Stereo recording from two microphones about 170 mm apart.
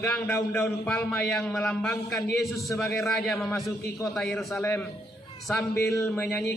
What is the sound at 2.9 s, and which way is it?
A man's voice, centre (ahead or behind).